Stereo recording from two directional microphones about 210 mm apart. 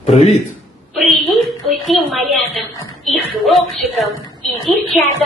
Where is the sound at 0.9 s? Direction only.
Centre (ahead or behind).